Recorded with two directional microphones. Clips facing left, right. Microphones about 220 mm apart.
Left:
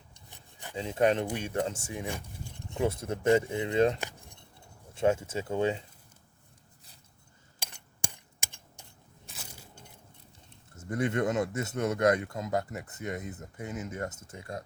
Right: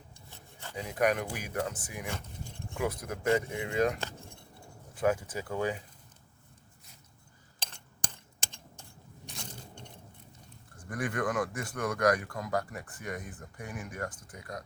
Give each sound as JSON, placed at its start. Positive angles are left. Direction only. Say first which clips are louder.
{"t": 0.3, "sound": "rub", "louder": "left 1 dB", "side_deg": 15}
{"t": 0.8, "sound": "speech", "louder": "left 3 dB", "side_deg": 25}
{"t": 4.0, "sound": "keys jangling", "louder": "even", "side_deg": 15}
{"t": 4.9, "sound": "speech", "louder": "left 2 dB", "side_deg": 25}
{"t": 7.6, "sound": "a sound", "louder": "even", "side_deg": 10}
{"t": 9.2, "sound": "biting", "louder": "right 4 dB", "side_deg": 5}
{"t": 10.8, "sound": "speech", "louder": "left 5 dB", "side_deg": 25}